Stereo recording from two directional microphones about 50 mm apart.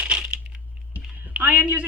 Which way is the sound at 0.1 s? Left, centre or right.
Right.